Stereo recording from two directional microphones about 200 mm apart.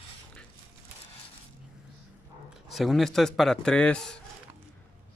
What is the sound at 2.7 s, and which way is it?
A man's voice, centre (ahead or behind).